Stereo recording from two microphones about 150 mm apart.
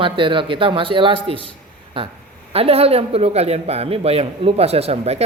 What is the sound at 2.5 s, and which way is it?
A man's voice, 40° right (ahead or behind).